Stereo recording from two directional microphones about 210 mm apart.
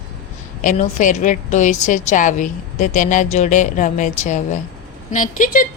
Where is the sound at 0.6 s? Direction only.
35° left (ahead or behind).